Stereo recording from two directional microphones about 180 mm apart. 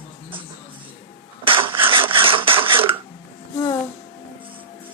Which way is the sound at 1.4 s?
30° right (ahead or behind).